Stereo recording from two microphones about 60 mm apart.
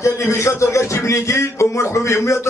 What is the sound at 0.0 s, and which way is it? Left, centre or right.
A man's voice, left.